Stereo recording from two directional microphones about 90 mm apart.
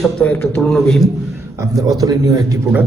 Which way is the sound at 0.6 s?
5° left (ahead or behind).